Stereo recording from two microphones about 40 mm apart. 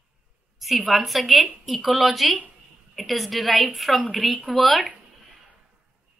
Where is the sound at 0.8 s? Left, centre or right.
Centre.